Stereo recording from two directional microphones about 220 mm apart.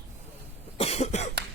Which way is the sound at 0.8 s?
30° left (ahead or behind).